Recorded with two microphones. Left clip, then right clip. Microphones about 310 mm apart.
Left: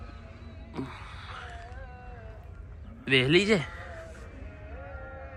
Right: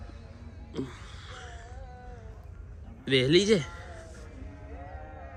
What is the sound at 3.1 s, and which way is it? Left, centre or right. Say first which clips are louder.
Speech: even; centre.